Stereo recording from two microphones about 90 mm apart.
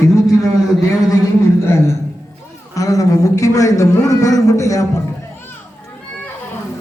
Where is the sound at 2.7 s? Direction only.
40° left (ahead or behind).